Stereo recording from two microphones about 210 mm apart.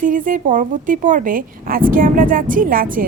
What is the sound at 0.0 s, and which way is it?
A woman's voice, 40° right (ahead or behind).